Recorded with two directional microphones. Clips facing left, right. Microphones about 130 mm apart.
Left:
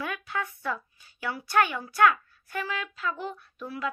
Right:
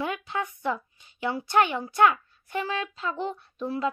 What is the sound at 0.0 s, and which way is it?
Speech, 20° right (ahead or behind).